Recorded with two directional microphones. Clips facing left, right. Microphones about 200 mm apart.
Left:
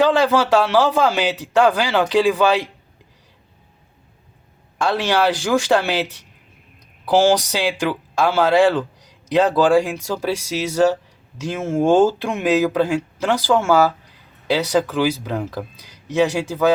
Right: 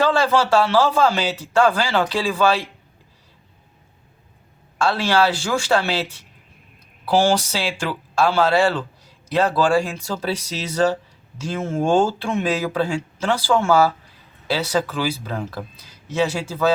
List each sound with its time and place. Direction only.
0.0 s speech: 15° left (ahead or behind)
4.8 s speech: 15° left (ahead or behind)